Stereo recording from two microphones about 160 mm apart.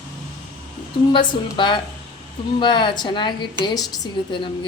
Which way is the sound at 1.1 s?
30° left (ahead or behind).